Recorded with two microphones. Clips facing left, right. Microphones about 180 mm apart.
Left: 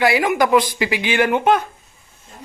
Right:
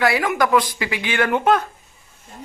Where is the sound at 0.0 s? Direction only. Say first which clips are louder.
Left 2 dB; 20° left (ahead or behind).